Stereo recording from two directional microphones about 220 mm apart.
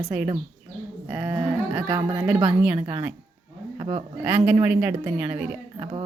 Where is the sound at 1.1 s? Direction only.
5° right (ahead or behind).